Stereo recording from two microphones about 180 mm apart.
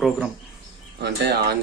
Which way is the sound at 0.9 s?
70° right (ahead or behind).